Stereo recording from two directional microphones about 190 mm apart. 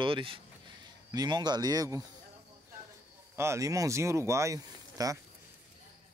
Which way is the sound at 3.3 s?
15° right (ahead or behind).